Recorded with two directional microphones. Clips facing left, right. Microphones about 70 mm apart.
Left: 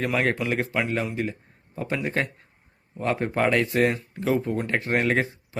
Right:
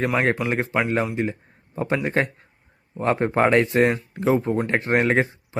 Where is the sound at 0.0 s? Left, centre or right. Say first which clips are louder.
Right 3 dB; right.